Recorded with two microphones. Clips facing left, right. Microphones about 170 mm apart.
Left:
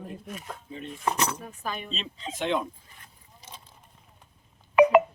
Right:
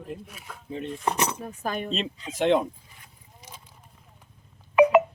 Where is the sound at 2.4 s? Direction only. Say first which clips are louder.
Right 6 dB; 65° right (ahead or behind).